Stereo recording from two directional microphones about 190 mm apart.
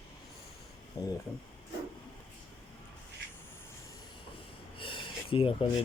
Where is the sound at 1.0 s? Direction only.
15° left (ahead or behind).